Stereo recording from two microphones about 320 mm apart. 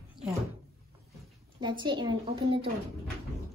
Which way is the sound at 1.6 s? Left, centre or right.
Centre.